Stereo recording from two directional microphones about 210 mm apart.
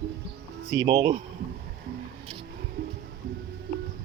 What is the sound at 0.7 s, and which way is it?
Speech, 20° right (ahead or behind).